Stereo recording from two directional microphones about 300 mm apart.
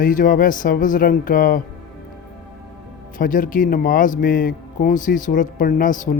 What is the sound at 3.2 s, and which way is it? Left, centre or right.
Speech, left.